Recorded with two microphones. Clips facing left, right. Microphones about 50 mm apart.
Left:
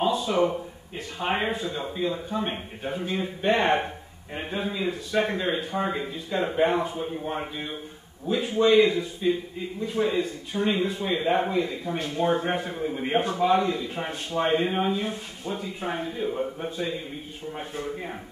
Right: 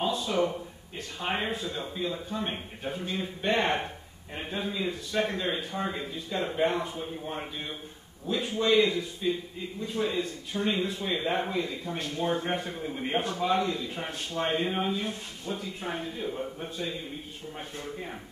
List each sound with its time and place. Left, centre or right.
0.0 s speech: centre